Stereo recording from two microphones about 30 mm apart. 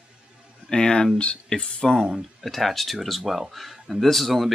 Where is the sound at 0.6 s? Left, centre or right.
Left.